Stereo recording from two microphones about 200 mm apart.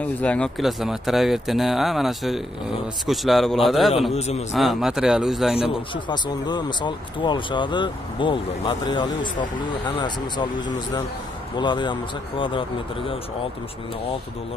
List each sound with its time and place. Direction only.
0.0 s speech: 5° left (ahead or behind)
4.1 s a man's voice: 35° left (ahead or behind)
4.5 s speech: centre (ahead or behind)
5.6 s speech: 25° left (ahead or behind)